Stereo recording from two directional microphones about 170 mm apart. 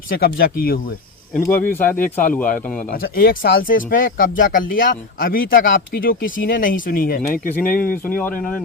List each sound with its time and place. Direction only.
0.1 s speech: 60° left (ahead or behind)
1.3 s speech: 10° left (ahead or behind)
2.9 s speech: 60° left (ahead or behind)
8.0 s speech: 10° left (ahead or behind)